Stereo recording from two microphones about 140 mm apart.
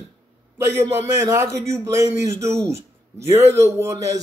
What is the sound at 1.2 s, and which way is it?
A man's voice, 20° right (ahead or behind).